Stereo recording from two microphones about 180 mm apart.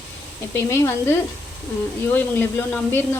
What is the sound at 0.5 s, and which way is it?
Speech, 15° left (ahead or behind).